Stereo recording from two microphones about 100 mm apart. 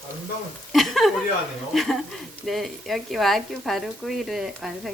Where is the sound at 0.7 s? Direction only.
Centre (ahead or behind).